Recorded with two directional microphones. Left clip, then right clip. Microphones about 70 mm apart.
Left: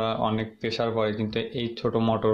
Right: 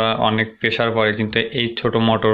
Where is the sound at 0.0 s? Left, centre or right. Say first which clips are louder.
Right 9 dB; left.